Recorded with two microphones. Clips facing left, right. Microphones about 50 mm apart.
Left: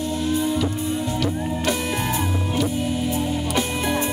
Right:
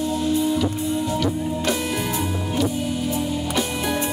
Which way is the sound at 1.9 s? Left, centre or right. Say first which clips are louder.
Even; left.